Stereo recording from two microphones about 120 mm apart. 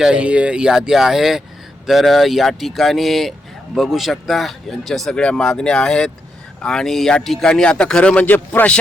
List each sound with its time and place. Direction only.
0.0 s a man's voice: 10° right (ahead or behind); by 8.8 s 10° left (ahead or behind)